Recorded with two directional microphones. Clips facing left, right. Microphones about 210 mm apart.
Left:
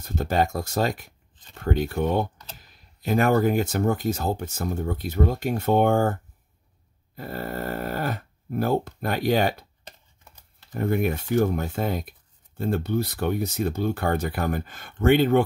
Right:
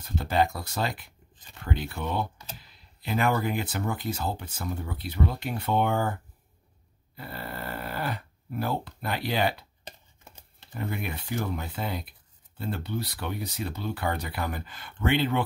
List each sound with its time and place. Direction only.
0.0 s speech: 45° left (ahead or behind)
7.2 s speech: 45° left (ahead or behind)
9.8 s a sound: 20° right (ahead or behind)
10.7 s speech: 50° left (ahead or behind)